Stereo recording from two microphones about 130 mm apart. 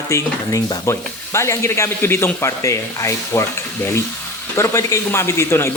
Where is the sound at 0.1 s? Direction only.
25° left (ahead or behind).